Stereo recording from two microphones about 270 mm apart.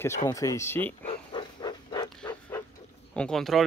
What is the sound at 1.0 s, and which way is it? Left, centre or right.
Wild animals, centre.